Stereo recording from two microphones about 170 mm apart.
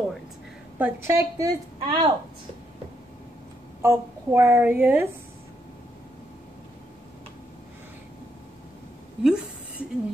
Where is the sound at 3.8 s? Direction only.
10° right (ahead or behind).